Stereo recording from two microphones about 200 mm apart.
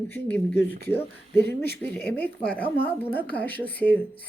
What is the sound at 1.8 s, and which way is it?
Speech, 10° left (ahead or behind).